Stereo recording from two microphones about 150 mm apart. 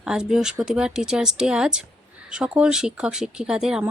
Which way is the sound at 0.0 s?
5° right (ahead or behind).